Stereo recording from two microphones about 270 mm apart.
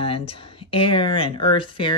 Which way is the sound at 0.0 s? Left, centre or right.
Left.